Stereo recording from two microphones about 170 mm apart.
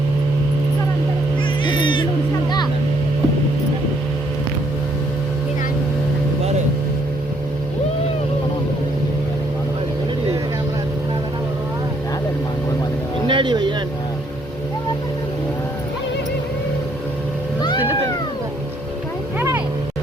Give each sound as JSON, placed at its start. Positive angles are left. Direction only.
{"t": 1.6, "sound": "music", "side_deg": 30}
{"t": 13.2, "sound": "a sound", "side_deg": -30}
{"t": 19.4, "sound": "vehicle", "side_deg": -10}